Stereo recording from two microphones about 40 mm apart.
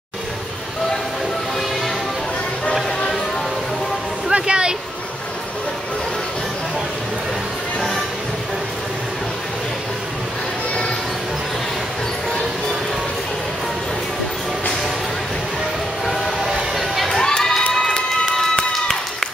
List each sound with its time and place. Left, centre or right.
4.3 s a sound: right
16.1 s train: centre
17.4 s crowd: centre